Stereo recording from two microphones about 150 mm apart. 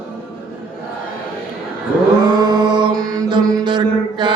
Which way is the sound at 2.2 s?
25° right (ahead or behind).